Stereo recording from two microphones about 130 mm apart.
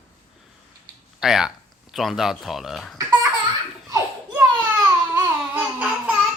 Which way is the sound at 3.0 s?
25° right (ahead or behind).